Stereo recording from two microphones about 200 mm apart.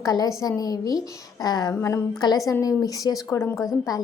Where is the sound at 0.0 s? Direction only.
20° left (ahead or behind).